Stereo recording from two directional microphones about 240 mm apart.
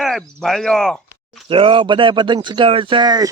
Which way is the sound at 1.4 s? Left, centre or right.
Right.